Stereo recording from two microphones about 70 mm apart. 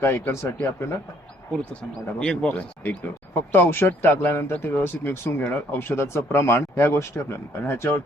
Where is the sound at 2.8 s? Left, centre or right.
Left.